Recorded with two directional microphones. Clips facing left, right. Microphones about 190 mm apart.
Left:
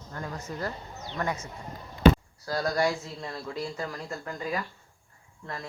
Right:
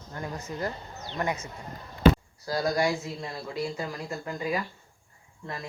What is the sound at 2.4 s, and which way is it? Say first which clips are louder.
Speech: right 1 dB; 10° right (ahead or behind).